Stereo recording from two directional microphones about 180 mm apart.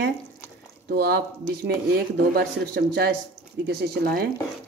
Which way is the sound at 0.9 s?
60° right (ahead or behind).